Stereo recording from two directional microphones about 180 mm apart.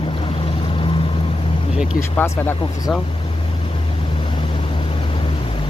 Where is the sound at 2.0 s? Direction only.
15° left (ahead or behind).